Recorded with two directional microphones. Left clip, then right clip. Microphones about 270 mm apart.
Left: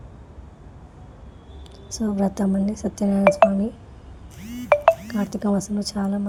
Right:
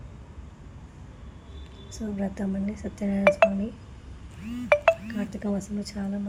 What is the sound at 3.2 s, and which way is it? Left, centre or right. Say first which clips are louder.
Speech: left 4 dB; centre.